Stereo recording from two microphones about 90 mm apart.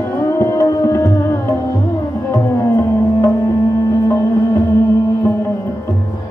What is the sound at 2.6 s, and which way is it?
Music, 25° left (ahead or behind).